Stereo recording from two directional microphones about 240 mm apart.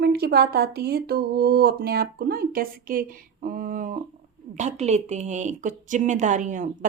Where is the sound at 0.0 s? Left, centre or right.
Right.